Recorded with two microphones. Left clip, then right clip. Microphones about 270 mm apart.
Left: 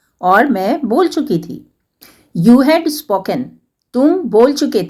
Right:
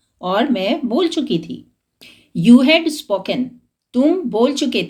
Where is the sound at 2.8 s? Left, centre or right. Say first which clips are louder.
Left 3 dB; centre.